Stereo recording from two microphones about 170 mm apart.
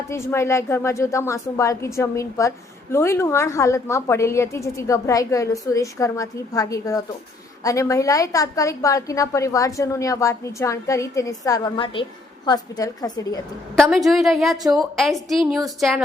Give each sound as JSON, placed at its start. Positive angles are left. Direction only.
{"t": 0.1, "sound": "a woman's voice", "side_deg": 15}
{"t": 13.7, "sound": "a woman's voice", "side_deg": 0}